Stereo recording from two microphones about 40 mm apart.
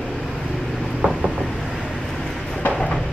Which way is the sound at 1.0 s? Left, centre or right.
Centre.